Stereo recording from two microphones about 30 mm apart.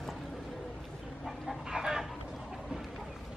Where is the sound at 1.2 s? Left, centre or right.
Centre.